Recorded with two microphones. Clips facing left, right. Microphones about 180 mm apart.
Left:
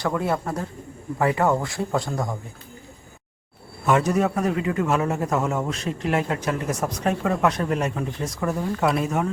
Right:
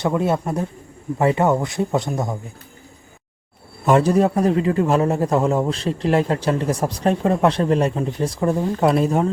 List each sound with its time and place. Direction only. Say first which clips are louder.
0.0 s speech: right 4 dB; 20° right (ahead or behind)
3.8 s a man's voice: right 5 dB; 35° right (ahead or behind)